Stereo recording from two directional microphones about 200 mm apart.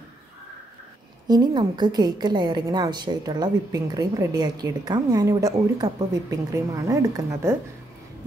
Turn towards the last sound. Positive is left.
turn(degrees=-15)  # may be behind; listen again after turning